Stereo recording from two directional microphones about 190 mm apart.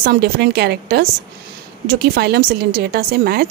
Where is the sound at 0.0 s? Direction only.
55° right (ahead or behind).